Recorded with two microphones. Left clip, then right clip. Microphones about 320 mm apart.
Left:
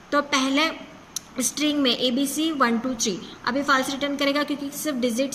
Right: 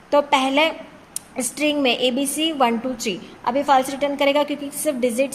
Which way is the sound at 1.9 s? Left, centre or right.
Right.